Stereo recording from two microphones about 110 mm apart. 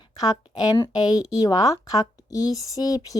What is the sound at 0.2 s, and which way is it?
Speech, 40° left (ahead or behind).